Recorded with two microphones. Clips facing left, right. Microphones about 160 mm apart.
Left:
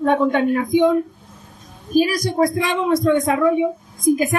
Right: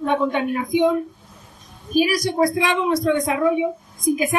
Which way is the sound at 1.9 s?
50° left (ahead or behind).